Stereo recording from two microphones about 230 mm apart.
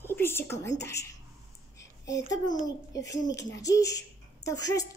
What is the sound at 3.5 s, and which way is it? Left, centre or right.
A woman's voice, centre.